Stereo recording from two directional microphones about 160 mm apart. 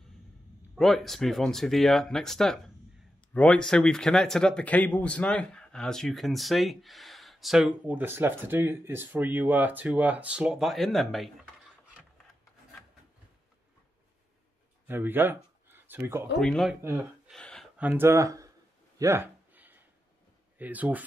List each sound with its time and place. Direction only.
0.7 s speech: centre (ahead or behind)
14.9 s speech: 10° right (ahead or behind)
16.3 s speech: centre (ahead or behind)
17.3 s a sound: 5° left (ahead or behind)
17.7 s speech: 10° right (ahead or behind)
18.9 s a sound: 15° right (ahead or behind)
20.5 s speech: 10° right (ahead or behind)